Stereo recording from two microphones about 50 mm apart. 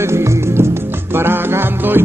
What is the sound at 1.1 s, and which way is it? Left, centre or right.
Music, right.